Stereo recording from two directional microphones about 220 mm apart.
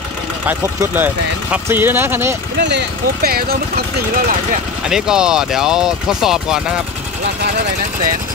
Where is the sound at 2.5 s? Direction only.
50° right (ahead or behind).